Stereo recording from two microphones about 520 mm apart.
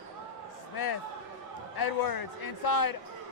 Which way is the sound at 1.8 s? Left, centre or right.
Left.